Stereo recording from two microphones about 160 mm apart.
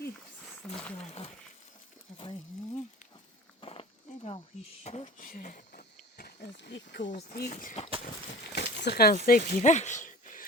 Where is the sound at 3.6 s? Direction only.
35° left (ahead or behind); by 5.8 s 55° left (ahead or behind).